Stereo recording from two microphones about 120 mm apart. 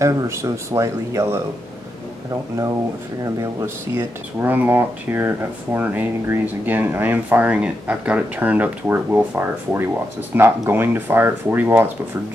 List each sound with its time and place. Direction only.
0.0 s speech: 25° right (ahead or behind)
3.3 s speech: 20° right (ahead or behind)